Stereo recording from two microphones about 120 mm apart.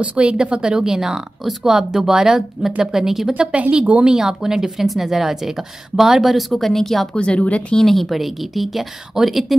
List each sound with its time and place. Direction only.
0.0 s speech: 10° right (ahead or behind)